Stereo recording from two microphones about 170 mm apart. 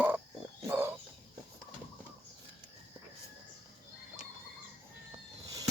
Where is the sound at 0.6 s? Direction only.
15° right (ahead or behind).